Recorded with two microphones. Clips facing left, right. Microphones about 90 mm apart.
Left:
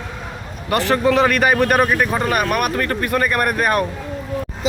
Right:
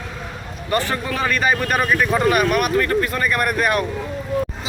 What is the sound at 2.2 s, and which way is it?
Speech, 40° left (ahead or behind).